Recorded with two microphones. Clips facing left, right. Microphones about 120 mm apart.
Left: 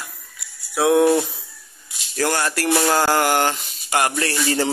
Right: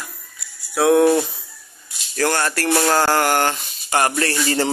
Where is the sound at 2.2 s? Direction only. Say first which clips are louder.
Right 1 dB; 10° left (ahead or behind).